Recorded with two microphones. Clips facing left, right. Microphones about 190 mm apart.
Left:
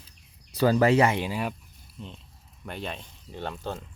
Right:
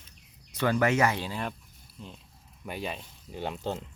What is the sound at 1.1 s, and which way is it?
Speech, 15° left (ahead or behind).